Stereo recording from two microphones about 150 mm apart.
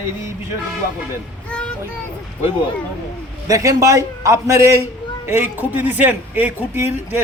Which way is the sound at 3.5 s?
20° right (ahead or behind).